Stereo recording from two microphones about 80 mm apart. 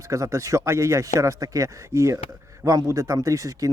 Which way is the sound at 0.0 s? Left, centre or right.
Right.